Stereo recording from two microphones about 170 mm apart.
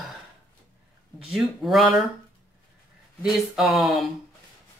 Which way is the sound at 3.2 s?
Centre (ahead or behind).